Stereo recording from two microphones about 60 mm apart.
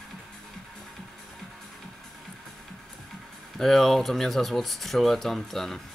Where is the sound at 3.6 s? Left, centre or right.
Centre.